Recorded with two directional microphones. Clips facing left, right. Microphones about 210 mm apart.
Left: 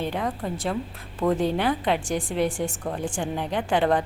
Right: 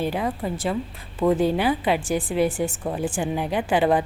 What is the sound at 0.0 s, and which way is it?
Speech, 5° right (ahead or behind).